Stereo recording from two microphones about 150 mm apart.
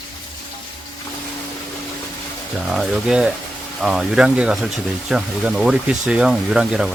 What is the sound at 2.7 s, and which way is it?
Speech, 5° right (ahead or behind).